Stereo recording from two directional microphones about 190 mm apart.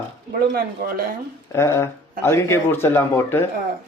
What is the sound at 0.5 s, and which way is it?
Speech, 50° right (ahead or behind).